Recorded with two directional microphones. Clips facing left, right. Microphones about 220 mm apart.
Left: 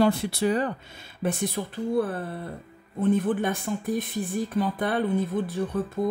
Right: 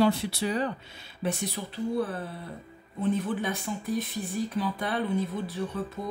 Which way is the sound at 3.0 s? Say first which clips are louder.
Left 5 dB; 50° left (ahead or behind).